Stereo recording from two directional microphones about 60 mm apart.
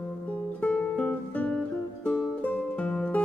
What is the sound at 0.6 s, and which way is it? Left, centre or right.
Music, centre.